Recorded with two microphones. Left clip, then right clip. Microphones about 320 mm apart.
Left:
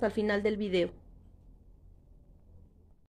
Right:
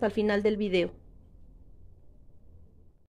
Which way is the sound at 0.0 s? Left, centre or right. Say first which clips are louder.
Right 3 dB; centre.